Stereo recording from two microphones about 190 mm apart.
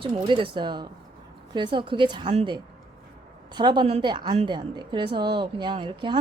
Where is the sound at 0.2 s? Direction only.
25° right (ahead or behind).